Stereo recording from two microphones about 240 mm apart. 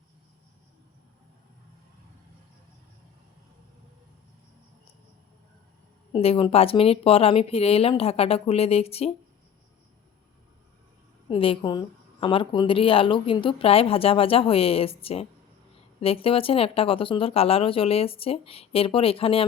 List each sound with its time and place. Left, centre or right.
6.1 s speech: left
11.3 s speech: left